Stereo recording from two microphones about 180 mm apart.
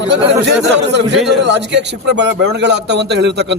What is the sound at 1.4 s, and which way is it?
A man's voice, 75° right (ahead or behind).